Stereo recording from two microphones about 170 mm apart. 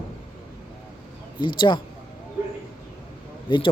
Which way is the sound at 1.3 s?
30° left (ahead or behind).